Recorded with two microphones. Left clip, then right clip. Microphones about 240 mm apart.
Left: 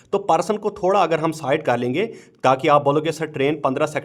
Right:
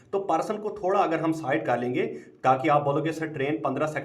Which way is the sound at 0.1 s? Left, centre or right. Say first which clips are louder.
Left 7 dB; left.